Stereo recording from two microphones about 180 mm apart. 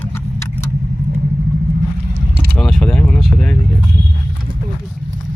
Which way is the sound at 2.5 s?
5° left (ahead or behind).